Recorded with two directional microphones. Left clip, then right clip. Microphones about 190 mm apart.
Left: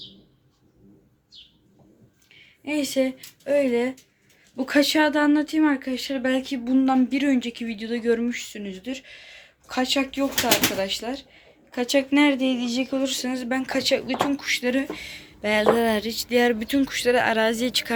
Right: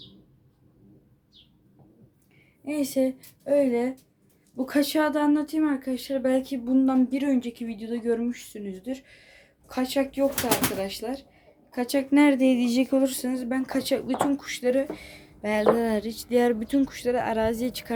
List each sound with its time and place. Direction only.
2.6 s speech: 5° right (ahead or behind)
12.1 s a sound: 30° right (ahead or behind)
13.1 s speech: 15° right (ahead or behind)